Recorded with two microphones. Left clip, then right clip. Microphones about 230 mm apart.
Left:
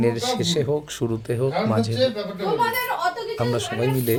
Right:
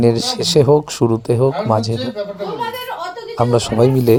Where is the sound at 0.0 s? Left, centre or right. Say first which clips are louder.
Right 6 dB; right.